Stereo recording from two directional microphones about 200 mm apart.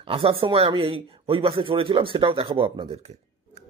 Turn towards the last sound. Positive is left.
turn(degrees=-30)  # may be behind; listen again after turning